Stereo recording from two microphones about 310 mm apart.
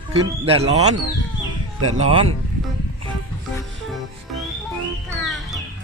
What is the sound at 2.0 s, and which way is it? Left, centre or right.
Speech, centre.